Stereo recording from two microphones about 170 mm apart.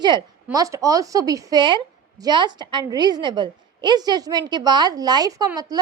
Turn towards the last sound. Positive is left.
turn(degrees=-20)  # may be behind; listen again after turning